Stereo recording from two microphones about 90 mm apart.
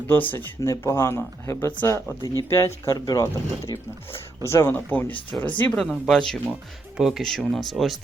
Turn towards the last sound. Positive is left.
turn(degrees=0)  # may be behind; listen again after turning